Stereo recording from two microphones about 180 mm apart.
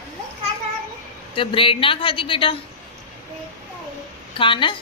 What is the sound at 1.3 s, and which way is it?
A woman's voice, 30° left (ahead or behind).